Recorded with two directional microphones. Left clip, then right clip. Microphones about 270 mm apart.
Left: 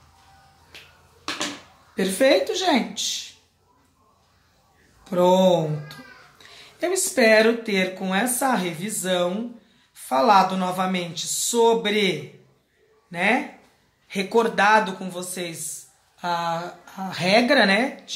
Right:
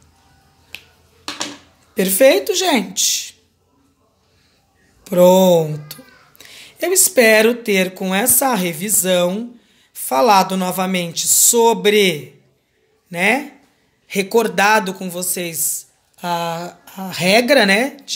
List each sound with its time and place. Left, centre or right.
2.0 s a woman's voice: right
5.0 s a child's voice: right